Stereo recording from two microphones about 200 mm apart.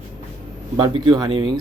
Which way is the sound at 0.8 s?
20° right (ahead or behind).